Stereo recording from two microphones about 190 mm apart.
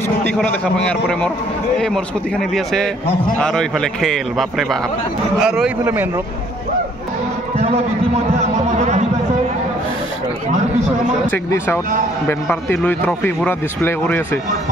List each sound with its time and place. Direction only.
0.4 s a man's voice: 5° left (ahead or behind)
7.5 s a sound: 35° right (ahead or behind)
8.4 s music: 35° right (ahead or behind)
11.2 s speech: 10° left (ahead or behind)